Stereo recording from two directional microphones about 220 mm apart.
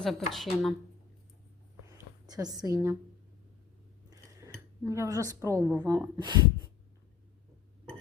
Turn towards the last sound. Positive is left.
turn(degrees=-20)  # may be behind; listen again after turning